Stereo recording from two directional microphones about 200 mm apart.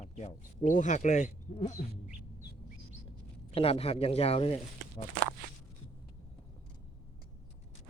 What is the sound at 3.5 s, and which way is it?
Speech, 30° left (ahead or behind).